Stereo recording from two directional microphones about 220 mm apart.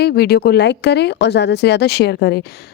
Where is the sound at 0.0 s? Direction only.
45° left (ahead or behind).